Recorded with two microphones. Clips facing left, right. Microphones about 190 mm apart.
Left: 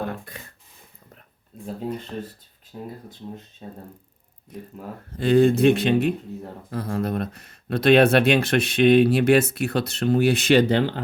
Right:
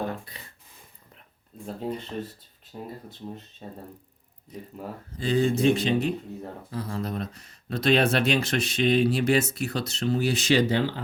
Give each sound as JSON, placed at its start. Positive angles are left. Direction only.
{"t": 0.0, "sound": "a sound", "side_deg": 50}
{"t": 2.7, "sound": "speech", "side_deg": -5}
{"t": 4.5, "sound": "speech", "side_deg": 55}